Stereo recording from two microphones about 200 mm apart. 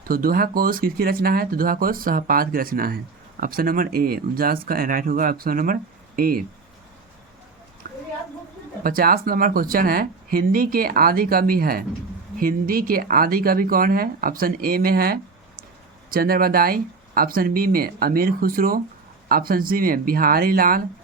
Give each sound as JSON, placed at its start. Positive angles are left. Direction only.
{"t": 0.1, "sound": "speech", "side_deg": -45}
{"t": 7.9, "sound": "a sound", "side_deg": -45}
{"t": 8.8, "sound": "speech", "side_deg": -45}